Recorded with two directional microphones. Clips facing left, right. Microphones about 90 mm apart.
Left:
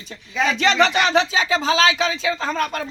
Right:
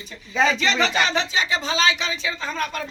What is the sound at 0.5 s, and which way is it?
Speech, 90° left.